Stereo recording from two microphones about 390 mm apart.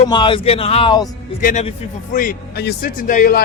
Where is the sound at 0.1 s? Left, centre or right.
Centre.